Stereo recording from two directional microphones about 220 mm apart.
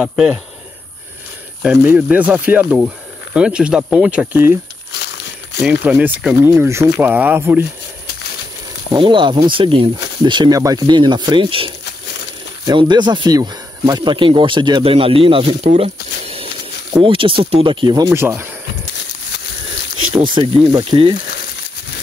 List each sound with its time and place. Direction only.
0.0 s speech: 5° right (ahead or behind)
1.6 s speech: 5° right (ahead or behind)
4.9 s crumpling: 50° left (ahead or behind)
5.6 s speech: 5° right (ahead or behind)
8.9 s speech: 20° right (ahead or behind)
20.3 s speech: 20° right (ahead or behind)